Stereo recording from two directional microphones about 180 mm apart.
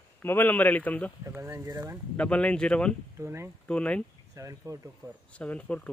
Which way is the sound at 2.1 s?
5° left (ahead or behind).